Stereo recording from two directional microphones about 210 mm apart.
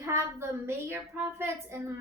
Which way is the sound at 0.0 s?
10° right (ahead or behind).